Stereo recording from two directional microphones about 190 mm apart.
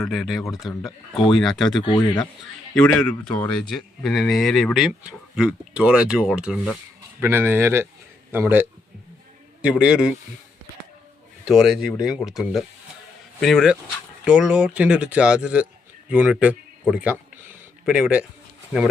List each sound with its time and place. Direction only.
0.0 s speech: centre (ahead or behind)
1.8 s speech: 25° left (ahead or behind)
2.7 s speech: 5° left (ahead or behind)
11.4 s speech: centre (ahead or behind)